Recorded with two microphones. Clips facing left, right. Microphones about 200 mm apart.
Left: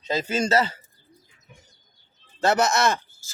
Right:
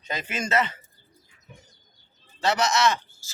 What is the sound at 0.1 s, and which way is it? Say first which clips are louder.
Speech: left 5 dB; 30° left (ahead or behind).